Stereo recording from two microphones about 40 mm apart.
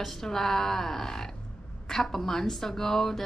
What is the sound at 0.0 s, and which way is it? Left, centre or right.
Speech, centre.